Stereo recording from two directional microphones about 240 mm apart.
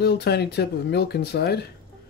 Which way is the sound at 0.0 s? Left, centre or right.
Left.